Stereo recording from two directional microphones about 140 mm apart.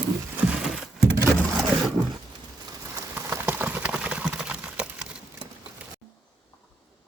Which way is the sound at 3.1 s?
15° right (ahead or behind).